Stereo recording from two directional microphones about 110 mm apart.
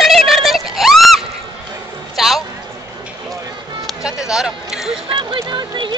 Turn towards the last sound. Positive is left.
turn(degrees=-45)  # may be behind; listen again after turning